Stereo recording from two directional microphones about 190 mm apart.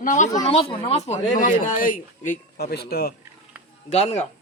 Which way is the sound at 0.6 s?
30° left (ahead or behind).